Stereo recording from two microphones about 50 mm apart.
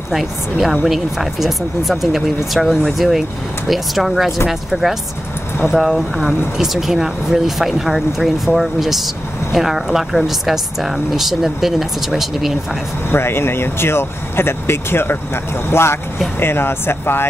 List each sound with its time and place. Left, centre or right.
0.1 s speech: centre
13.1 s speech: left